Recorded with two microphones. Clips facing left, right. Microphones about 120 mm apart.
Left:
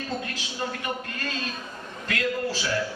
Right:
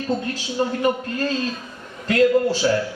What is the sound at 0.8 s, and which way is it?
A man's voice, 35° right (ahead or behind).